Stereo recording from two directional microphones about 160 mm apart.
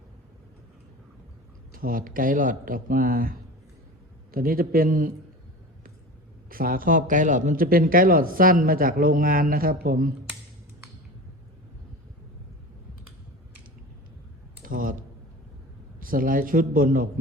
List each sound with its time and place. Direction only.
1.7 s a man's voice: 60° right (ahead or behind)
6.5 s a man's voice: 60° right (ahead or behind)
14.6 s computer keyboard: 60° right (ahead or behind)
16.0 s a man's voice: 60° right (ahead or behind)